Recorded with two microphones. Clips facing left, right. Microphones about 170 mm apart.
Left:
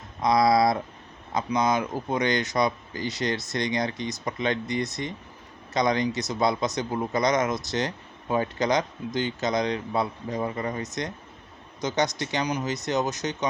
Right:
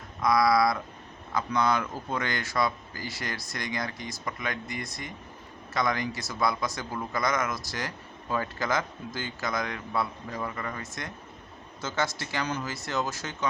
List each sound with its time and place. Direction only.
0.2 s a man's voice: 20° left (ahead or behind)